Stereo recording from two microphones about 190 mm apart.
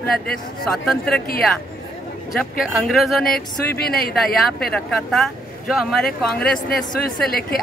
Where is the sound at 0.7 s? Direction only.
Centre (ahead or behind).